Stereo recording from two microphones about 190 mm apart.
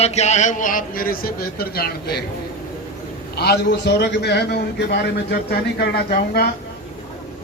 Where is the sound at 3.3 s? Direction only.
60° left (ahead or behind).